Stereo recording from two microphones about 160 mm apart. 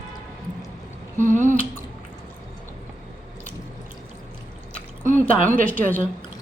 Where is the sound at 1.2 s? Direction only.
50° right (ahead or behind).